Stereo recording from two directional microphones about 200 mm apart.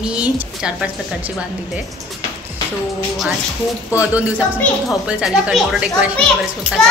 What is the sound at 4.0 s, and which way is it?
A woman's voice, 5° right (ahead or behind).